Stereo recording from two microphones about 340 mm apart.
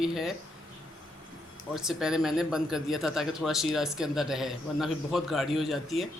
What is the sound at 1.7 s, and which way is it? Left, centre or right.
A man's voice, centre.